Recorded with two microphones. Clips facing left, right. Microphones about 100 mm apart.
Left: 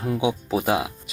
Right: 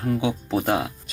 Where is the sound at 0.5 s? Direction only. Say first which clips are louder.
Right 1 dB; 5° left (ahead or behind).